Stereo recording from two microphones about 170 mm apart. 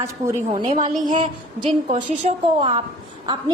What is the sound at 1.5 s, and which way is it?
A woman's voice, 30° right (ahead or behind).